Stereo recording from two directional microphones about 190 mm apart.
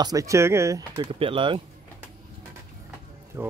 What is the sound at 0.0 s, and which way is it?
Speech, 15° right (ahead or behind).